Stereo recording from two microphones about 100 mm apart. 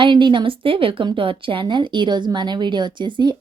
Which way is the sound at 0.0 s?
50° right (ahead or behind).